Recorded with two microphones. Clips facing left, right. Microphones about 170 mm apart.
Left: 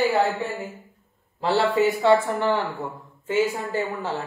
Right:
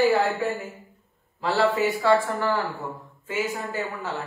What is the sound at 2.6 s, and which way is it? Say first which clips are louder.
Speech: left 1 dB; centre (ahead or behind).